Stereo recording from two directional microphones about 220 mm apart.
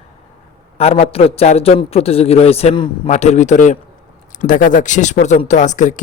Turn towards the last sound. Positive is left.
turn(degrees=35)  # may be behind; listen again after turning